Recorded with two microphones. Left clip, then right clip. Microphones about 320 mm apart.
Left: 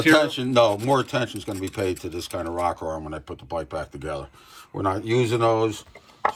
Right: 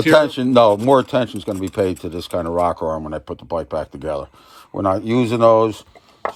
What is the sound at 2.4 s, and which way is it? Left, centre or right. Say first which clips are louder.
Speech: right 7 dB; centre.